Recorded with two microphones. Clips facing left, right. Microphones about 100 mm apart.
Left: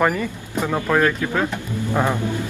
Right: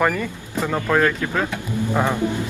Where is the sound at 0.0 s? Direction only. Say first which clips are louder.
Left 1 dB; 5° left (ahead or behind).